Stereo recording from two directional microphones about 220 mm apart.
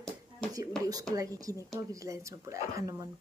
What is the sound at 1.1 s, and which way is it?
Speech, 15° right (ahead or behind).